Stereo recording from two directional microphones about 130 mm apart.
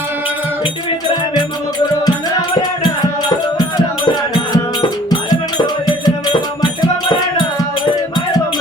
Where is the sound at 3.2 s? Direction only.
30° left (ahead or behind).